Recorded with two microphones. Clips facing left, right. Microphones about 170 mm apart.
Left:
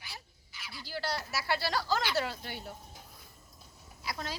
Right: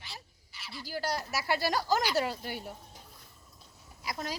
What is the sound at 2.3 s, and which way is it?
Speech, 10° right (ahead or behind).